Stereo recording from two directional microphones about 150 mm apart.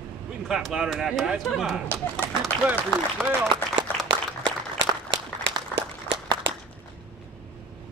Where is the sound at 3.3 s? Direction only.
15° left (ahead or behind).